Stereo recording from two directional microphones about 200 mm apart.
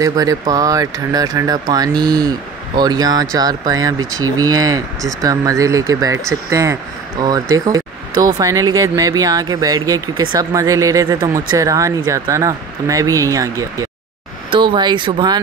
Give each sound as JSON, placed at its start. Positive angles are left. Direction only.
{"t": 0.0, "sound": "speech", "side_deg": -15}